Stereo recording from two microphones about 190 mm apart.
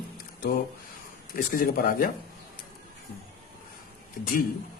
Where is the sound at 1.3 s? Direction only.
50° left (ahead or behind).